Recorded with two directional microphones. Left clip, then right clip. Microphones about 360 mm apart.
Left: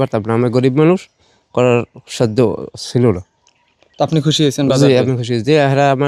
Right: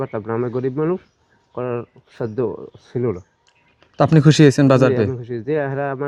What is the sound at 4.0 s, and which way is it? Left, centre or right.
Speech, centre.